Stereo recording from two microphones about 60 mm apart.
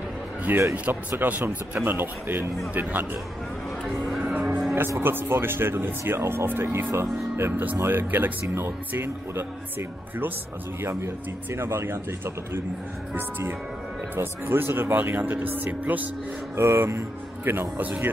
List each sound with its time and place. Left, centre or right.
0.5 s speech: right
4.0 s music: centre
4.3 s music: centre
5.0 s speech: right
14.1 s speech: right
16.5 s speech: right